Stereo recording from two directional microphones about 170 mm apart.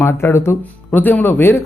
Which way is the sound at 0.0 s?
15° left (ahead or behind).